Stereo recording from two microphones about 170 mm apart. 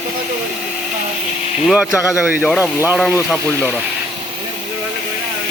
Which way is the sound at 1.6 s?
5° right (ahead or behind).